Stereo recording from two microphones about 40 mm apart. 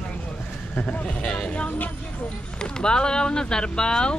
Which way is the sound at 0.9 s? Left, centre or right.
Left.